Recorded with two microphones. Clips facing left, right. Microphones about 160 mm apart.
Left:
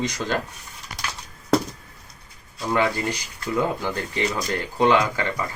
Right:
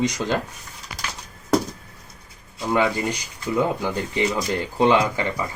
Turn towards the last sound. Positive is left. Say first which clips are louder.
# right 1 dB
turn(degrees=-15)  # may be behind; listen again after turning